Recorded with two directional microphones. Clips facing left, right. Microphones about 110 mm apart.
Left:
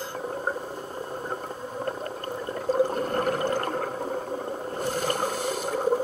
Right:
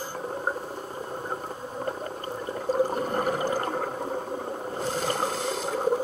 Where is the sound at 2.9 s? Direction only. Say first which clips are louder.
Left 1 dB; 15° right (ahead or behind).